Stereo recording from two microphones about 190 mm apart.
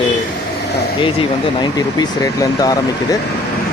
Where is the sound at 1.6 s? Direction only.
20° left (ahead or behind).